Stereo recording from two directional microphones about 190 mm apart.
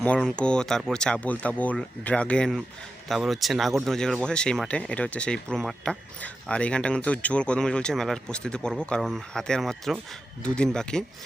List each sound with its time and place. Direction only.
0.0 s speech: 5° left (ahead or behind)